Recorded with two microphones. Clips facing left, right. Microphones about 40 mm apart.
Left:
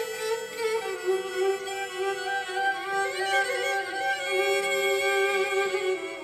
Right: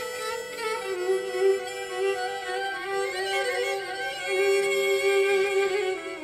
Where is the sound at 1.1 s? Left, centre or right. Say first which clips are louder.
Right 3 dB; left.